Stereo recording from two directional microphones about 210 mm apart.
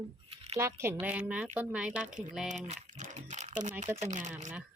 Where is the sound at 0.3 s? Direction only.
25° right (ahead or behind).